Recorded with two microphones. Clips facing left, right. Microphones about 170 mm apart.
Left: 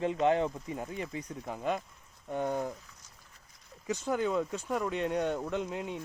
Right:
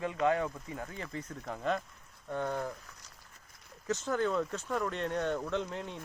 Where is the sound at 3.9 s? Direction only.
10° left (ahead or behind).